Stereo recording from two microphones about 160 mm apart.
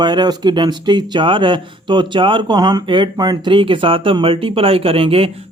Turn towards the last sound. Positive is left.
turn(degrees=-35)  # may be behind; listen again after turning